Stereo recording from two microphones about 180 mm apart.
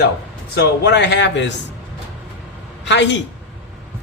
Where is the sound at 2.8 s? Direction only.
80° left.